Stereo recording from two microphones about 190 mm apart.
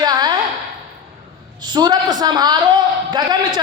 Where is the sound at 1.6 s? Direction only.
20° right (ahead or behind).